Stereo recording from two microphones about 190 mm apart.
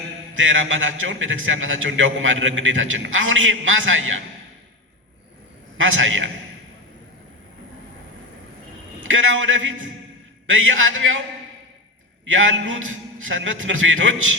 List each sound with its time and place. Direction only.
0.3 s a man's voice: 90° right
5.7 s a man's voice: 90° right
9.0 s a man's voice: 90° right
12.3 s a man's voice: 90° right